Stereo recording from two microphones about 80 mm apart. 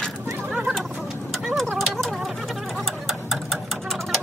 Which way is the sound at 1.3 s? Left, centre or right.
Centre.